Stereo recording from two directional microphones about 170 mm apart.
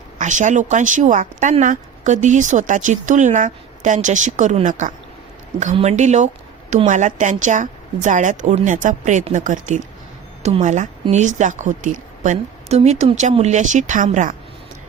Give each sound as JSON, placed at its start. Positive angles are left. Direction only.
{"t": 0.2, "sound": "speech", "side_deg": -45}